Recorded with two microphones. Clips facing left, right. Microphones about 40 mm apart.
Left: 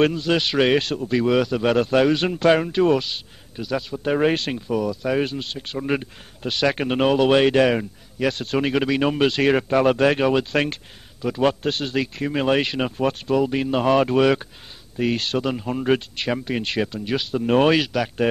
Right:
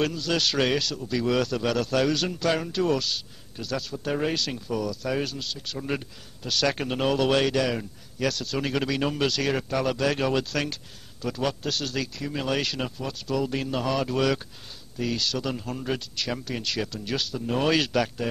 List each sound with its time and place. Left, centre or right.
0.0 s speech: left
1.2 s speech: centre
4.6 s speech: left
7.5 s speech: left
10.2 s speech: left
11.1 s a man's voice: left
11.4 s speech: left
17.3 s speech: left
17.7 s speech: centre